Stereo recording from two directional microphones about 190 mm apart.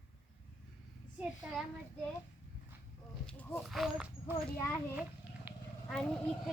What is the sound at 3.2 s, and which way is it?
Speech, centre (ahead or behind).